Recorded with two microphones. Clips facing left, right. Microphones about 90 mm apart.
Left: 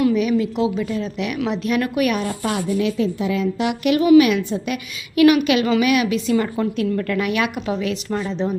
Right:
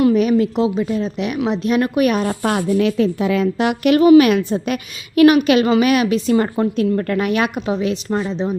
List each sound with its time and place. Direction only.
0.0 s a woman's voice: 45° right (ahead or behind)
2.2 s a woman's voice: 50° right (ahead or behind)
7.7 s a woman's voice: 25° right (ahead or behind)
8.3 s speech: 15° right (ahead or behind)